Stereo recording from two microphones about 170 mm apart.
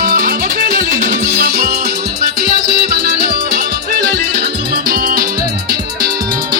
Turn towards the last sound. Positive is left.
turn(degrees=-50)  # may be behind; listen again after turning